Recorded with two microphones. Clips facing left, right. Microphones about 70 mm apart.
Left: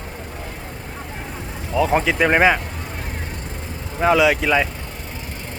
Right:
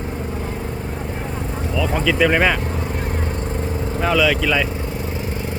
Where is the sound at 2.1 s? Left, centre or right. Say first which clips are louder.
Right 4 dB; left.